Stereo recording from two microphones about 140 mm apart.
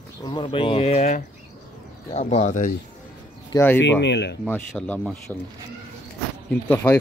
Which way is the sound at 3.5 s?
15° left (ahead or behind).